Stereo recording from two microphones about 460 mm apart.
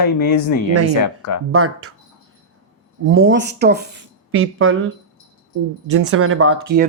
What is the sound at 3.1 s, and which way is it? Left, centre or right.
Speech, right.